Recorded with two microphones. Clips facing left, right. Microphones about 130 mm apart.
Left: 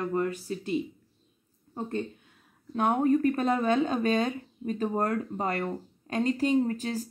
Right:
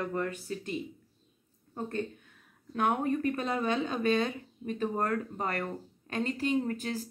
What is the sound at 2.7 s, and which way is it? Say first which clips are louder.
Speech: left 5 dB; 30° left (ahead or behind).